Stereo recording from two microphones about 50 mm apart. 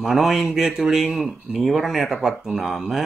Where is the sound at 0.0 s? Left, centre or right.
Centre.